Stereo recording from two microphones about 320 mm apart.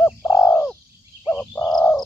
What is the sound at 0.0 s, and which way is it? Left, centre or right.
Bird, centre.